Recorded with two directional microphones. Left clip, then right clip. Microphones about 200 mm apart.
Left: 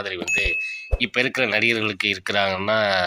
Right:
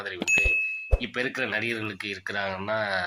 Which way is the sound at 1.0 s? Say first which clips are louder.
Left 10 dB; 35° left (ahead or behind).